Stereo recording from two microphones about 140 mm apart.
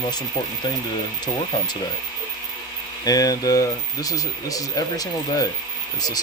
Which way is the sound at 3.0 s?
25° left (ahead or behind).